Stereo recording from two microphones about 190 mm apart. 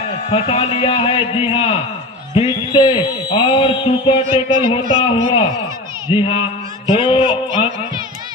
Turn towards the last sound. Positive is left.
turn(degrees=25)  # may be behind; listen again after turning